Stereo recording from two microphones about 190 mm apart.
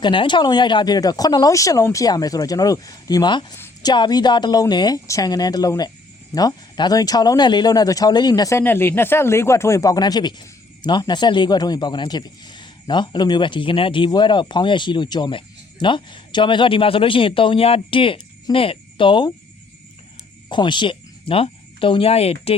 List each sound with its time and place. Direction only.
0.0 s speech: 25° left (ahead or behind)
20.5 s speech: 25° left (ahead or behind)